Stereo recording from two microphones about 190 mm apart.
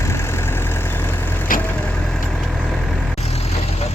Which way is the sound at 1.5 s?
45° left (ahead or behind).